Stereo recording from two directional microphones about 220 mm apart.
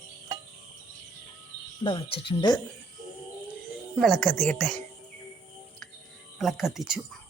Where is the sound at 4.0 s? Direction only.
Centre (ahead or behind).